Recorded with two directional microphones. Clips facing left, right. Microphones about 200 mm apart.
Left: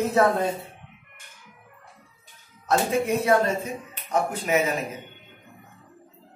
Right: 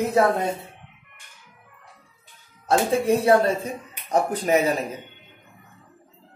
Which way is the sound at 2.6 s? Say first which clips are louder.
Right 3 dB; 30° right (ahead or behind).